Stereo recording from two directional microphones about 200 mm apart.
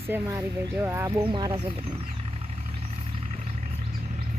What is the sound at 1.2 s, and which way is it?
Speech, 25° right (ahead or behind).